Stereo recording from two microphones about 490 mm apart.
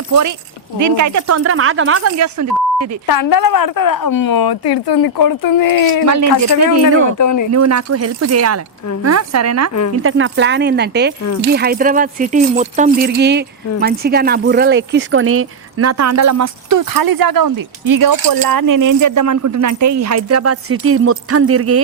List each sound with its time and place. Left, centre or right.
0.1 s speech: right
3.1 s a woman's voice: left
6.7 s speech: right
7.2 s a woman's voice: left
7.5 s speech: right